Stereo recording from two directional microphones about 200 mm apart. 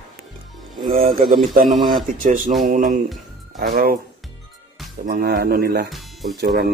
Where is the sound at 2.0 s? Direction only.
40° right (ahead or behind).